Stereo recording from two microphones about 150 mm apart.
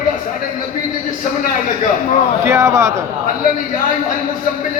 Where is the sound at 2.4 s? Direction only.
20° right (ahead or behind).